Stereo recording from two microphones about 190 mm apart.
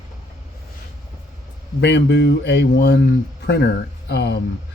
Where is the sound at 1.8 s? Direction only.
65° left (ahead or behind).